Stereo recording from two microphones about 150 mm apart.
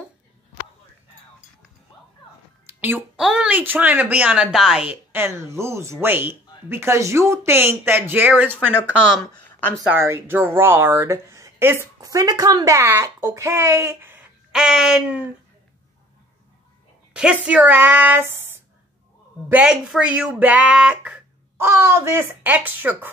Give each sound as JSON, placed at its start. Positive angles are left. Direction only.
{"t": 2.6, "sound": "a sound", "side_deg": -15}
{"t": 3.3, "sound": "speech", "side_deg": -10}
{"t": 5.1, "sound": "speech", "side_deg": -15}
{"t": 9.3, "sound": "a sound", "side_deg": 10}
{"t": 9.8, "sound": "speech", "side_deg": -15}
{"t": 14.5, "sound": "speech", "side_deg": -5}
{"t": 17.1, "sound": "speech", "side_deg": -5}
{"t": 19.5, "sound": "speech", "side_deg": -5}